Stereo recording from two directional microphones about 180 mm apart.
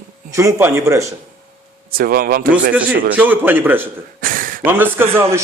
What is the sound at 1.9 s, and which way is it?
Speech, 55° right (ahead or behind).